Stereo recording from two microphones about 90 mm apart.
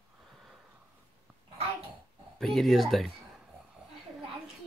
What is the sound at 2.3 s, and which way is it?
Speech, centre (ahead or behind).